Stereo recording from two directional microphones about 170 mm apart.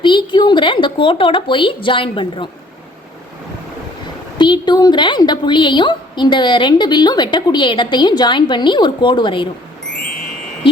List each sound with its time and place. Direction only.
0.0 s speech: 25° left (ahead or behind)
4.4 s a woman's voice: 25° left (ahead or behind)